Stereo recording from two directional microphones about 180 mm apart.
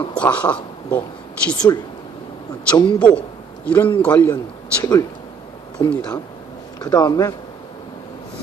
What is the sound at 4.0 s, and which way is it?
Speech, 10° left (ahead or behind).